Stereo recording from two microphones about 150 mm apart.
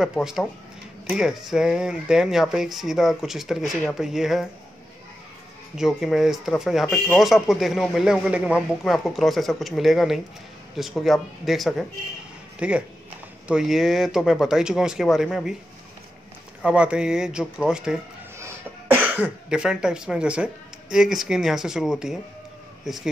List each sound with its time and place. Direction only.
0.0 s a man's voice: 5° right (ahead or behind)
5.8 s a man's voice: 5° right (ahead or behind)
16.6 s a man's voice: 5° right (ahead or behind)